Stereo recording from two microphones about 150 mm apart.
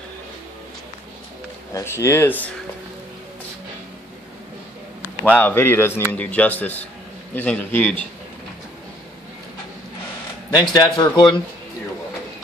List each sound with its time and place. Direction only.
1.7 s a man's voice: 20° left (ahead or behind)
5.2 s a man's voice: 10° left (ahead or behind)
10.5 s speech: 25° left (ahead or behind)